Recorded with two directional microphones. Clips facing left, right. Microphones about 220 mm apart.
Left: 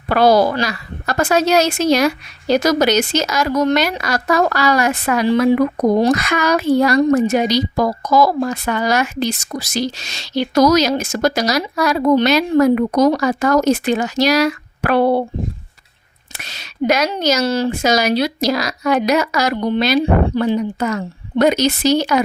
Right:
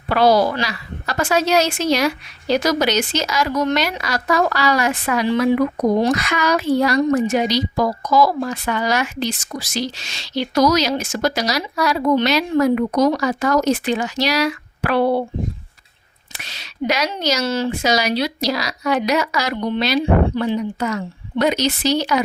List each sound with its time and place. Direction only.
0.1 s a woman's voice: 50° left (ahead or behind)
16.3 s a woman's voice: 45° left (ahead or behind)